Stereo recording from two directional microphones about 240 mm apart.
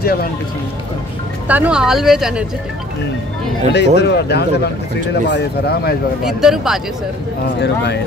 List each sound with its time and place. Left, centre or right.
0.0 s speech: left
1.5 s speech: centre
3.7 s speech: left
6.2 s speech: centre
7.6 s speech: left